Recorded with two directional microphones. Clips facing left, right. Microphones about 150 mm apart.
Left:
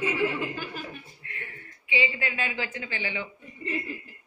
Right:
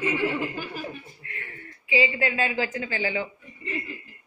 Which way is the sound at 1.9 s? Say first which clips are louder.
Right 5 dB; 35° right (ahead or behind).